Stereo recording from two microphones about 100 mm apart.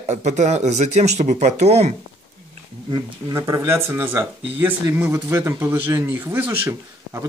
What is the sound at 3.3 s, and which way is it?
Speech, 30° right (ahead or behind).